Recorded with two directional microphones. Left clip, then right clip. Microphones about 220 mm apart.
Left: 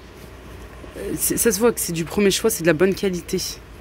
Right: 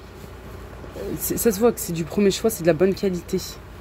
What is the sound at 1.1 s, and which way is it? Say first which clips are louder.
Speech: left 1 dB; centre (ahead or behind).